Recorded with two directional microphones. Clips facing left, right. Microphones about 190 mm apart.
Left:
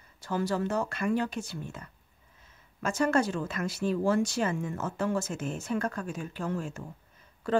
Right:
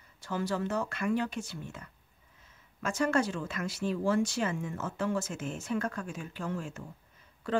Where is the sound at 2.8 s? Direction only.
35° left (ahead or behind).